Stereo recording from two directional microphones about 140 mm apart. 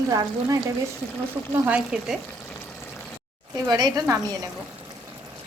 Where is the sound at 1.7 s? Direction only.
5° right (ahead or behind).